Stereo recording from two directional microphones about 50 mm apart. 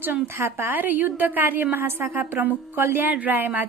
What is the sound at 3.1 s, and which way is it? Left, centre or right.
Speech, right.